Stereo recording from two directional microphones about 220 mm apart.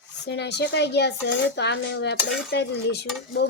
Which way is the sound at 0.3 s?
50° left (ahead or behind).